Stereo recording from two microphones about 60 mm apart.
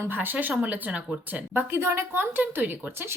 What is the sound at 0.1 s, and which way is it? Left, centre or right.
Speech, right.